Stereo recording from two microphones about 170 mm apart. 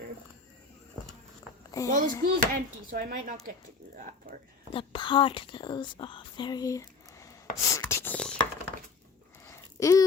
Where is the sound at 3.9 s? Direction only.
50° right (ahead or behind).